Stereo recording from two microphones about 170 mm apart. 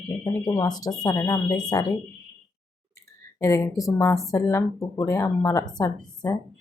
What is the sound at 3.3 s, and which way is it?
Speech, 15° left (ahead or behind).